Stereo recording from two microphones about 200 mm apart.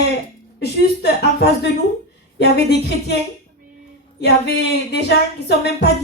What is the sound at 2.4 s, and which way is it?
Speech, 55° left (ahead or behind).